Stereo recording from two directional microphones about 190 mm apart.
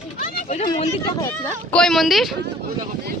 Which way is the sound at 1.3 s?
10° left (ahead or behind).